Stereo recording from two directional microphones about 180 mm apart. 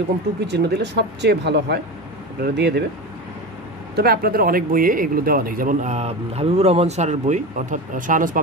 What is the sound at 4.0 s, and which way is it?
Speech, 60° right (ahead or behind).